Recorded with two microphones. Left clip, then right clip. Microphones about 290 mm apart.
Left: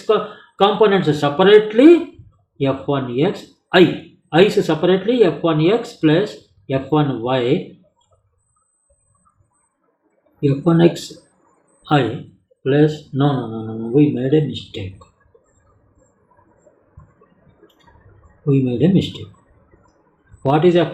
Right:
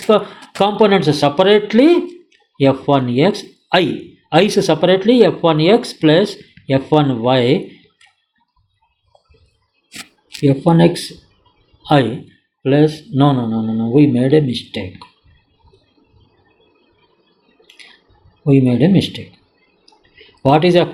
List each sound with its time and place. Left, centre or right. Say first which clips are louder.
0.1 s speech: right 4 dB; right
10.4 s speech: right 3 dB; right
12.6 s speech: right 2 dB; right
18.4 s speech: right 4 dB; right
20.4 s speech: right 3 dB; right